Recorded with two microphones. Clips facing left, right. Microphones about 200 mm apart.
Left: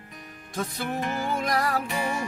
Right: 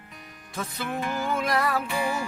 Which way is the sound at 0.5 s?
40° left (ahead or behind).